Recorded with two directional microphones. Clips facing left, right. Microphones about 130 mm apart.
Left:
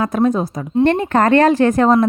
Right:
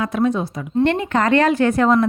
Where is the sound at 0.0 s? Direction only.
45° left (ahead or behind).